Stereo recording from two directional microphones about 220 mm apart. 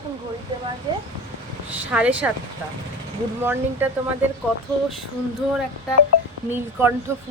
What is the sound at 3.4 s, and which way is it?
Speech, 10° right (ahead or behind).